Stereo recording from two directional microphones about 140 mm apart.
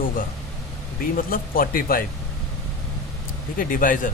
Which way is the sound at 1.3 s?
90° left.